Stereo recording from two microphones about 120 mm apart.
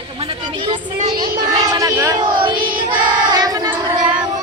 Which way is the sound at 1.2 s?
30° right (ahead or behind).